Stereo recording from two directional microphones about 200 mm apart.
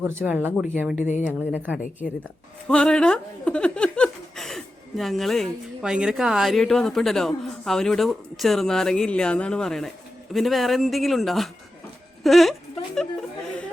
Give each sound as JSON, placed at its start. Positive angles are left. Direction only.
{"t": 0.0, "sound": "speech", "side_deg": -10}
{"t": 0.9, "sound": "speech", "side_deg": 35}
{"t": 1.3, "sound": "speech", "side_deg": -10}
{"t": 2.6, "sound": "speech", "side_deg": 5}